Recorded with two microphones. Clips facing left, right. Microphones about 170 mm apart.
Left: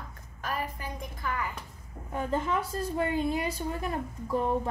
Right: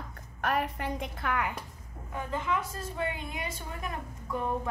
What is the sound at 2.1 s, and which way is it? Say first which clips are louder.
A woman's voice: left 3 dB; 35° left (ahead or behind).